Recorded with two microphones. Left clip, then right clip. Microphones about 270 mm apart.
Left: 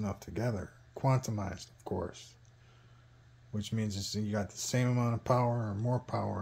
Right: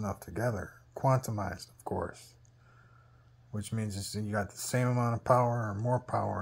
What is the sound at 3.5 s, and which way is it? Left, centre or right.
Speech, centre.